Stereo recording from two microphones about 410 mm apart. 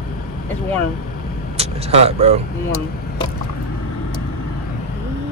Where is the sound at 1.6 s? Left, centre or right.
Centre.